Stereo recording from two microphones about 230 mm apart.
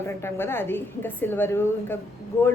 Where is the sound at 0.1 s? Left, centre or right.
Centre.